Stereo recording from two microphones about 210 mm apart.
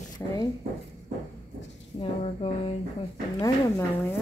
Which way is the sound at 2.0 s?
25° left (ahead or behind).